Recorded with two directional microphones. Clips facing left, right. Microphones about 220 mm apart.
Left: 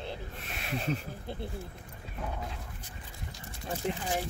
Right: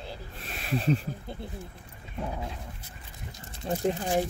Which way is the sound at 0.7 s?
35° right (ahead or behind).